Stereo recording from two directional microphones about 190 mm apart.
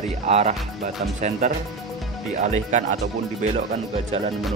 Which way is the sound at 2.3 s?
40° right (ahead or behind).